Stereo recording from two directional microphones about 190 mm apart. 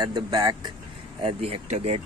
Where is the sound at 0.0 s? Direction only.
20° right (ahead or behind).